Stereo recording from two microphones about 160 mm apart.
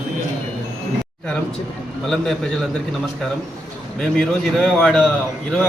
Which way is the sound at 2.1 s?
5° left (ahead or behind).